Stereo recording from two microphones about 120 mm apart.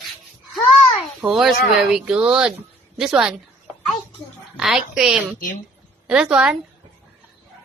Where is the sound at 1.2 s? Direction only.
5° right (ahead or behind).